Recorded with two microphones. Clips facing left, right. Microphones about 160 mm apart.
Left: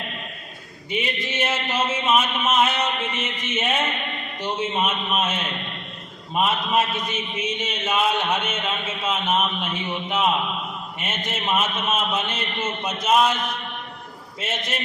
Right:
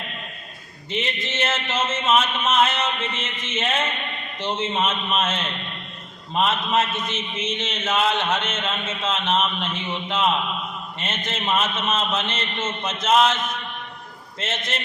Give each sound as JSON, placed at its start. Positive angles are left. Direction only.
{"t": 0.9, "sound": "a man's voice", "side_deg": 15}